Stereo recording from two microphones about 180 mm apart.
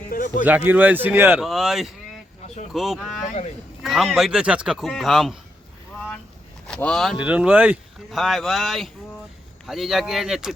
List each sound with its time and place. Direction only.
0.1 s a sound: 50° left (ahead or behind)
0.4 s speech: 10° right (ahead or behind)
6.7 s speech: 5° left (ahead or behind)